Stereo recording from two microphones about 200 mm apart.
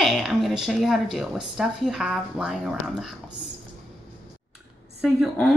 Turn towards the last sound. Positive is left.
turn(degrees=0)  # may be behind; listen again after turning